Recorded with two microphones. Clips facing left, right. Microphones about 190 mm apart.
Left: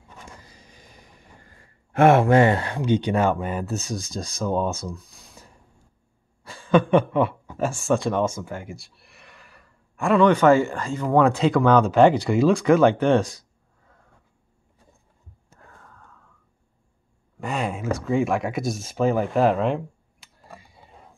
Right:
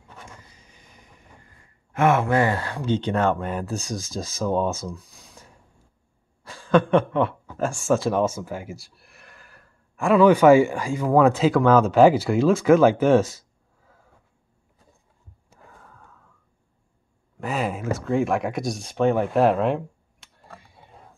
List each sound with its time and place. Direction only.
0.4 s vehicle: 35° left (ahead or behind)
2.0 s speech: 30° left (ahead or behind); by 5.5 s centre (ahead or behind)
6.4 s a sound: centre (ahead or behind)
7.5 s speech: centre (ahead or behind)
15.6 s wheeze: 5° right (ahead or behind)
17.4 s speech: 5° right (ahead or behind)